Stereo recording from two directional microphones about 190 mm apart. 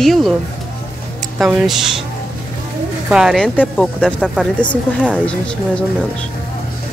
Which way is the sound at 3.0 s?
5° right (ahead or behind).